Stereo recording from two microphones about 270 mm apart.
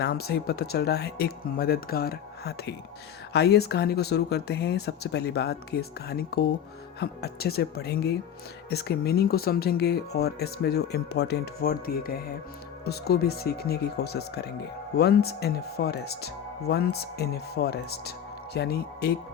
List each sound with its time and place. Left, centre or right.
0.0 s speech: left